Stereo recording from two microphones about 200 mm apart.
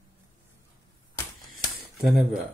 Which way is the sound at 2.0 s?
Centre (ahead or behind).